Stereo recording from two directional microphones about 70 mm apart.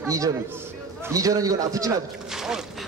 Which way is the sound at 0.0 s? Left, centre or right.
Right.